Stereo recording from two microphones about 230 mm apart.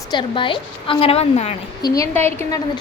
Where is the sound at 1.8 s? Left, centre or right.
Centre.